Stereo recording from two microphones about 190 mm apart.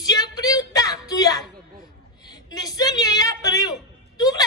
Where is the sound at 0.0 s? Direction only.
20° left (ahead or behind).